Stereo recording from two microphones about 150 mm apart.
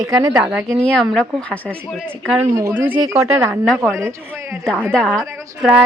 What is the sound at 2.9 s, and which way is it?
Speech, 25° right (ahead or behind).